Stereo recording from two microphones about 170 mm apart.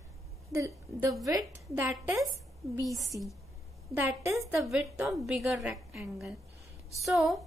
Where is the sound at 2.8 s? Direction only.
20° right (ahead or behind).